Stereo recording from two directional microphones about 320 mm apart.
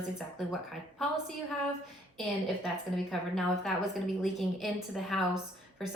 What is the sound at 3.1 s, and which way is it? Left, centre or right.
A woman's voice, centre.